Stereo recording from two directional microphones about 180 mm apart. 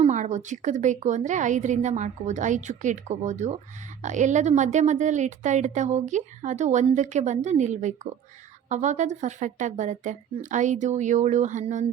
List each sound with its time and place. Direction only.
0.0 s a woman's voice: 40° right (ahead or behind)